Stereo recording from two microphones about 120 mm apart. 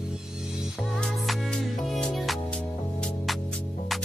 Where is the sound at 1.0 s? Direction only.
Centre (ahead or behind).